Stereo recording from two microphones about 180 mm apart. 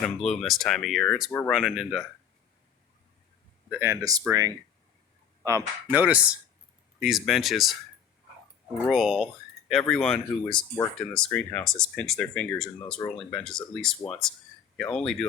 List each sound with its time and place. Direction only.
0.0 s speech: 5° left (ahead or behind)
3.7 s speech: 15° right (ahead or behind)
5.4 s speech: 15° right (ahead or behind); by 7.8 s centre (ahead or behind)
8.9 s speech: centre (ahead or behind)
10.5 s speech: 25° left (ahead or behind)
10.9 s speech: 5° left (ahead or behind)
13.0 s speech: 15° left (ahead or behind)
13.3 s speech: 5° left (ahead or behind)